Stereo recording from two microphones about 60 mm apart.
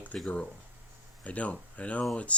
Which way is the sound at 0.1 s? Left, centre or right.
Centre.